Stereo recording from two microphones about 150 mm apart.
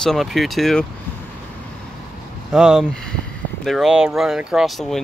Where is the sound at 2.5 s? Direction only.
5° right (ahead or behind).